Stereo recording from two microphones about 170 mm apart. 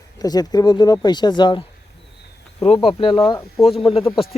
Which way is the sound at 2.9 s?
30° left (ahead or behind).